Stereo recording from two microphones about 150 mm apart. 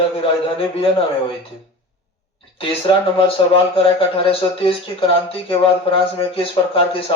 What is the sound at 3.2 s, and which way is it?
Speech, 35° left (ahead or behind).